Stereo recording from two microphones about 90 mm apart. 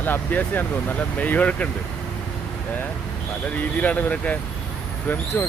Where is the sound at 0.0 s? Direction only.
20° left (ahead or behind).